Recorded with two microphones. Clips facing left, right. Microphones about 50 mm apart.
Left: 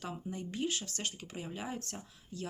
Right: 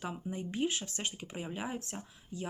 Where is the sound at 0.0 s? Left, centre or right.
Centre.